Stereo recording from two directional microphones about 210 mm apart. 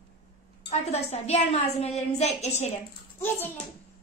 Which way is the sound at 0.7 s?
30° left (ahead or behind).